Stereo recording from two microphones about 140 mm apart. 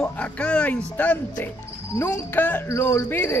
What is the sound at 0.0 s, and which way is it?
Speech, 10° left (ahead or behind).